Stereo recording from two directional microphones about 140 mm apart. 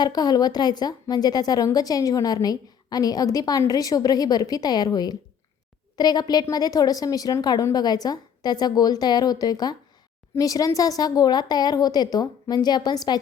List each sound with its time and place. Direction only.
0.0 s a woman's voice: 30° left (ahead or behind)